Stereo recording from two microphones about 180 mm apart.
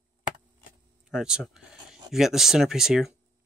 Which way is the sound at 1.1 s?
5° right (ahead or behind).